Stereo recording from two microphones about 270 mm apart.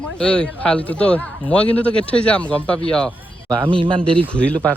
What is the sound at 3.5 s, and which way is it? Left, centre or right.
Speech, centre.